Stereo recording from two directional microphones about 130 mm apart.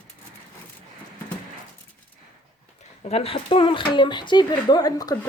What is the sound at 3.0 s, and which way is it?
Speech, 50° left (ahead or behind).